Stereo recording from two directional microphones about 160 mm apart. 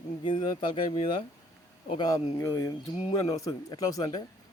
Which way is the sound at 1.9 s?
25° left (ahead or behind).